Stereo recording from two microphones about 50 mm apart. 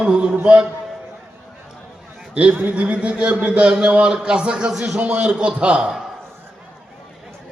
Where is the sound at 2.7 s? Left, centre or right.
Right.